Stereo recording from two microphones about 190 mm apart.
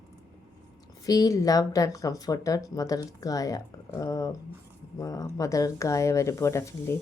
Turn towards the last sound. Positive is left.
turn(degrees=15)  # may be behind; listen again after turning